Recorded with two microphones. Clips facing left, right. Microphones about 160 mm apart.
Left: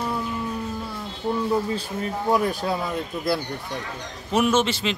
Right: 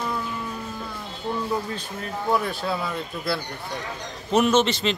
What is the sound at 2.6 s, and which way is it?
A man's voice, 15° left (ahead or behind).